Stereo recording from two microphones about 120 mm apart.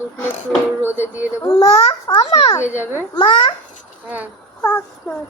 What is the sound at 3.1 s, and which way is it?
Speech, 40° left (ahead or behind).